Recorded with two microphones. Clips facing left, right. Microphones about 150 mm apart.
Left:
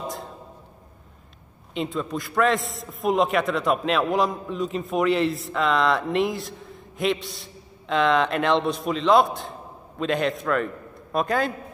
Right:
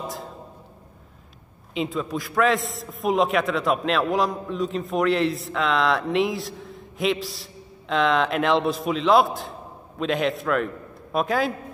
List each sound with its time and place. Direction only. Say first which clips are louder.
1.7 s a man's voice: right 1 dB; centre (ahead or behind)